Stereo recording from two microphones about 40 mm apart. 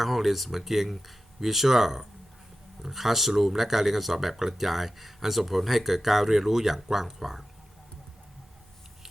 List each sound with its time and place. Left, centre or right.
0.0 s speech: centre